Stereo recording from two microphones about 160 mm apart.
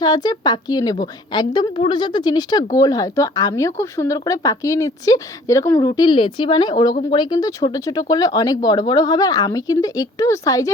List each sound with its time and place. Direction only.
0.0 s speech: 25° left (ahead or behind)